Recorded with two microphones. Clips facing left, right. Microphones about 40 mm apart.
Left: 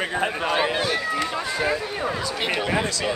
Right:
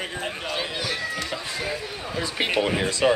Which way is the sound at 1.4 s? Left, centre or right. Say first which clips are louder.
Left 6 dB; left.